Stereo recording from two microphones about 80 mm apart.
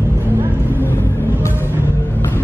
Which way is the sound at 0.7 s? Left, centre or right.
Left.